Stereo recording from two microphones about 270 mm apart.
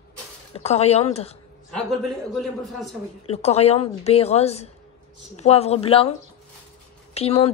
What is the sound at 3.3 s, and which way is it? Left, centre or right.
Speech, left.